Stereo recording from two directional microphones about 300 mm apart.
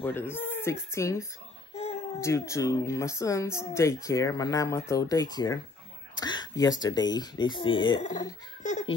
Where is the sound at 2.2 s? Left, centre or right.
Centre.